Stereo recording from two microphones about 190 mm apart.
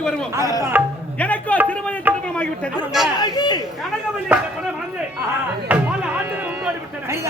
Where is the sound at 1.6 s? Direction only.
5° left (ahead or behind).